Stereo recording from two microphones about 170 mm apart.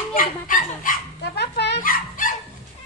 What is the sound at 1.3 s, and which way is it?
Dog, 80° left.